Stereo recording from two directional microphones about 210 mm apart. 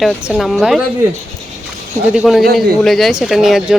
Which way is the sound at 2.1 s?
Centre (ahead or behind).